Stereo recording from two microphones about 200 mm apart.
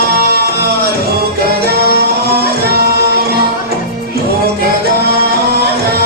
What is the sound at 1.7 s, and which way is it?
Music, 50° right (ahead or behind).